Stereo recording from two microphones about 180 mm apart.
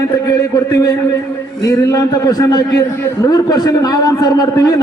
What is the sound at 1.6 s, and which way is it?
A man's voice, 20° left (ahead or behind).